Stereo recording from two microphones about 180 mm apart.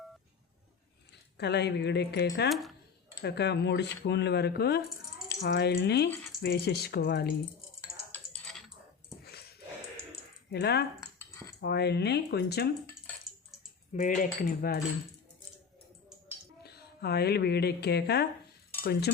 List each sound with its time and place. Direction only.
1.4 s speech: 70° left (ahead or behind)
2.5 s speech: centre (ahead or behind)
3.2 s speech: 65° left (ahead or behind)
8.1 s typing: 5° left (ahead or behind)
10.5 s speech: 65° left (ahead or behind)
13.9 s speech: 45° left (ahead or behind)
16.6 s a woman's voice: 65° left (ahead or behind)
18.8 s cutlery: 65° left (ahead or behind)